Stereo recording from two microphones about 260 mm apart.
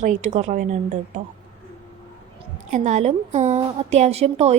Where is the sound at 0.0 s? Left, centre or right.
Right.